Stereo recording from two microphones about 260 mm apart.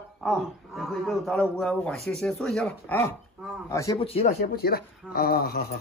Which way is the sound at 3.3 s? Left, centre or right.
Centre.